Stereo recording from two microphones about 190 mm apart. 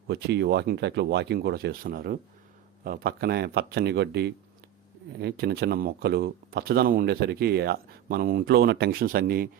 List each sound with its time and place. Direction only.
0.1 s speech: 60° right (ahead or behind)